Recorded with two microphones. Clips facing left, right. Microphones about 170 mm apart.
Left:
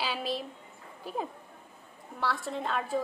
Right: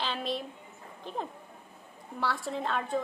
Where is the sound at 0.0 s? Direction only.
5° left (ahead or behind).